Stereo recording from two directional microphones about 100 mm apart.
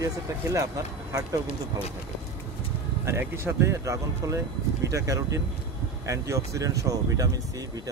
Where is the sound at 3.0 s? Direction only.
25° right (ahead or behind).